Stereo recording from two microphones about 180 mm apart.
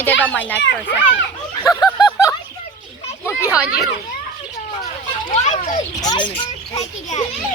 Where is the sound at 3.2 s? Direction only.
15° left (ahead or behind).